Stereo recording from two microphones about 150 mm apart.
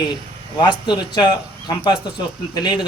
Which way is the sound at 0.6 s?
30° left (ahead or behind).